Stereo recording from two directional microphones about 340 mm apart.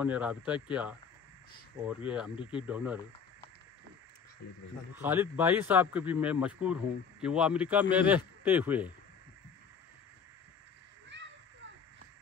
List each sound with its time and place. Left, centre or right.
0.0 s speech: centre
2.0 s speech: centre
2.3 s speech: centre
2.6 s speech: centre
4.9 s speech: centre
11.1 s children playing: right